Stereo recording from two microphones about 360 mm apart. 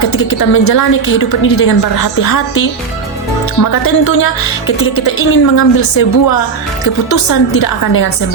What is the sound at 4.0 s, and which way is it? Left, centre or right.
A woman's voice, left.